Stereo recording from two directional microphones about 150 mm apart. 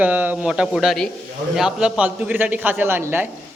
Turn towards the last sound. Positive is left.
turn(degrees=-15)  # may be behind; listen again after turning